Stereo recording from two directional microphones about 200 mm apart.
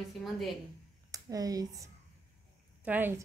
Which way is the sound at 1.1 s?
20° right (ahead or behind).